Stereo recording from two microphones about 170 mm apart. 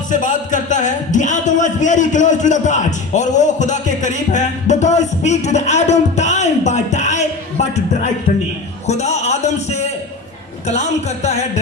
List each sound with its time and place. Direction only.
0.1 s speech: 50° left (ahead or behind)
8.9 s a sound: 40° left (ahead or behind)
10.7 s speech: 40° left (ahead or behind)